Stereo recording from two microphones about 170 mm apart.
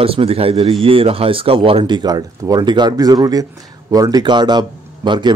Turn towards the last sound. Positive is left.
turn(degrees=-25)  # may be behind; listen again after turning